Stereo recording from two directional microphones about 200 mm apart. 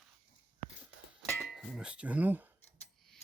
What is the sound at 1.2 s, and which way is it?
Speech, centre (ahead or behind).